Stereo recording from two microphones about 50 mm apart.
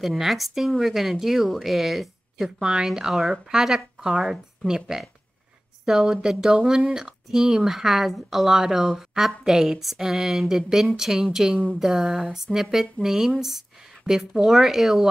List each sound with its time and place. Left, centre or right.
0.0 s a woman's voice: centre
2.6 s speech: centre
2.9 s a woman's voice: centre